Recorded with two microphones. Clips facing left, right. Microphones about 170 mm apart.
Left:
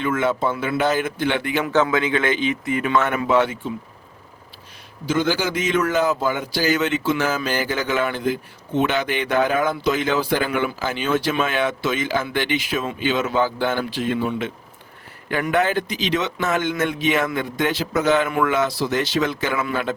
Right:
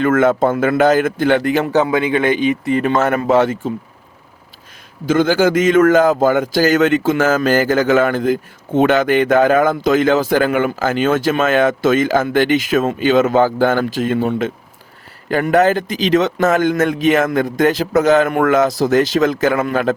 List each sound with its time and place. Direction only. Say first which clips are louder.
0.0 s a man's voice: right 8 dB; 50° right (ahead or behind)
1.8 s speech: right 4 dB; 15° right (ahead or behind)
2.7 s speech: right 3 dB; 40° right (ahead or behind)
5.0 s a man's voice: right 8 dB; 50° right (ahead or behind)